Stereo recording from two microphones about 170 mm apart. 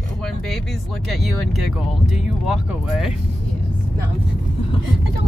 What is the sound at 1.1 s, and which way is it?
Speech, centre (ahead or behind).